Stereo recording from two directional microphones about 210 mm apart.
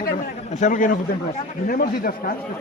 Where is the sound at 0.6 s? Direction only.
40° left (ahead or behind).